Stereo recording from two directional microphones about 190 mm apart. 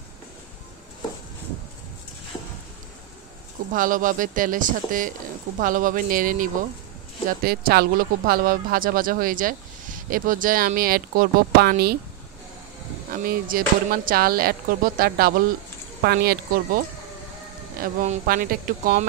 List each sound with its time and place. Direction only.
3.7 s speech: 45° right (ahead or behind)
13.1 s speech: 50° right (ahead or behind)
18.0 s speech: 45° right (ahead or behind)